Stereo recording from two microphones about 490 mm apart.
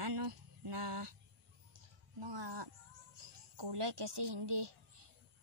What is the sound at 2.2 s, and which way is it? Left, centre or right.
Speech, right.